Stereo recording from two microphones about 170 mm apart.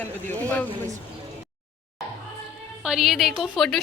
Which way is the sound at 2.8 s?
5° right (ahead or behind).